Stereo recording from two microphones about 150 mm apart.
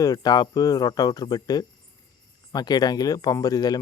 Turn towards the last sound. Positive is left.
turn(degrees=25)  # may be behind; listen again after turning